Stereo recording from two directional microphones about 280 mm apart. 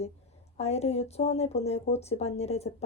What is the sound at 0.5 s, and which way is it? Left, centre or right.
Speech, left.